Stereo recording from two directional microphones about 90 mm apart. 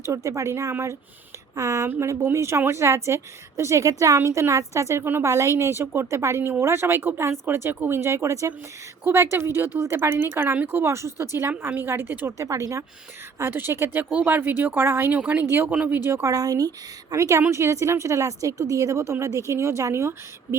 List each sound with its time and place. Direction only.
0.0 s a woman's voice: 35° right (ahead or behind)
12.4 s a woman's voice: 35° right (ahead or behind)
15.7 s speech: 10° right (ahead or behind)
16.0 s a woman's voice: 25° right (ahead or behind)
16.2 s speech: 40° right (ahead or behind)